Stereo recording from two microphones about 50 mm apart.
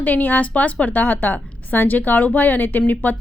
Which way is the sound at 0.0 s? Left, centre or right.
Left.